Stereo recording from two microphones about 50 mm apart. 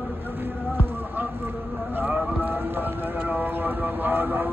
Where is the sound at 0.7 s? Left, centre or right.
Right.